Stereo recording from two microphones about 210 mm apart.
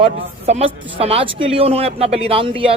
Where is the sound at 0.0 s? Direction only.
30° right (ahead or behind).